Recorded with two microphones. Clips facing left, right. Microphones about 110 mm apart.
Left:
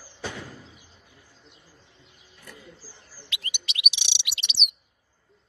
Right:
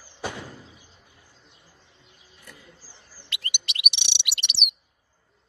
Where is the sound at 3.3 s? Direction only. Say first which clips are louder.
Right 1 dB; 55° right (ahead or behind).